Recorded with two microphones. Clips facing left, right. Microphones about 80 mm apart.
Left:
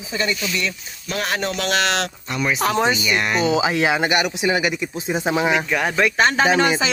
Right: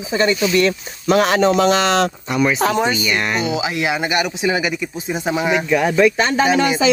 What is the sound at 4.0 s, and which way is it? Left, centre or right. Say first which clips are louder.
Speech: right 1 dB; centre.